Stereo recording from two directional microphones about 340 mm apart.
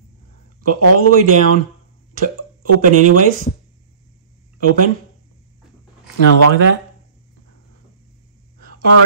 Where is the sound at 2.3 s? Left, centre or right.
Right.